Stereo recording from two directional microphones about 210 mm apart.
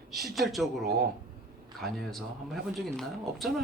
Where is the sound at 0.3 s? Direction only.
Centre (ahead or behind).